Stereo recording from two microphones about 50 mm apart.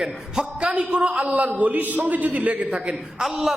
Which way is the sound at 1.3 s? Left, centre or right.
Right.